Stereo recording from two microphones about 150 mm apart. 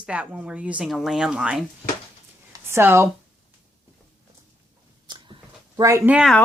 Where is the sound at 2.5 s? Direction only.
15° right (ahead or behind).